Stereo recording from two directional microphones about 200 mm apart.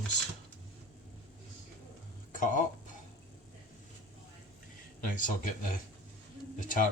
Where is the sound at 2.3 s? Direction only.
40° left (ahead or behind).